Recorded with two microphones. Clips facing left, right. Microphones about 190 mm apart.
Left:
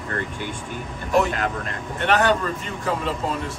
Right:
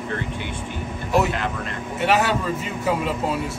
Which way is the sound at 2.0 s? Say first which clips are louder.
Left 1 dB; 5° right (ahead or behind).